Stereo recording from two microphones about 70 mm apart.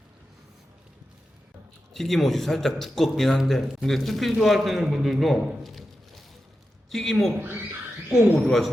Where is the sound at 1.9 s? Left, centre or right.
Centre.